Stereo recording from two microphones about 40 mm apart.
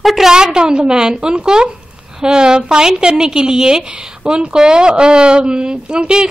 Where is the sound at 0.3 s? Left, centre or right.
Centre.